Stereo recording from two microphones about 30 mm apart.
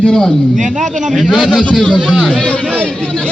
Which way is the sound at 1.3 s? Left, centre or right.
Left.